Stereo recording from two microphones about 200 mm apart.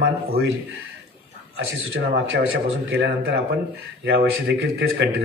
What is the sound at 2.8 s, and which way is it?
A man's voice, 60° right (ahead or behind).